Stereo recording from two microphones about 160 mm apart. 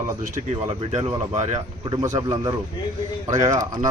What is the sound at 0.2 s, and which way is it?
Speech, 50° right (ahead or behind).